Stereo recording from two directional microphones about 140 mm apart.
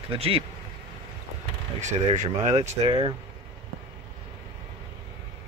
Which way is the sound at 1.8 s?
60° right (ahead or behind).